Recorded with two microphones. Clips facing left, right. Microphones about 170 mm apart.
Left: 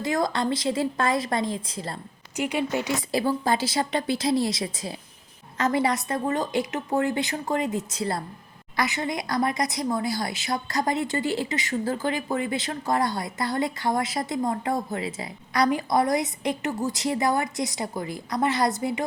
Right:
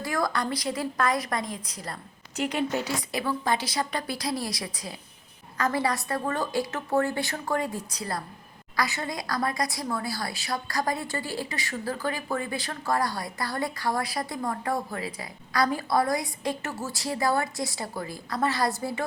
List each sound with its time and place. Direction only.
0.0 s speech: 20° left (ahead or behind)
2.3 s speech: 10° left (ahead or behind)
2.9 s speech: 30° left (ahead or behind)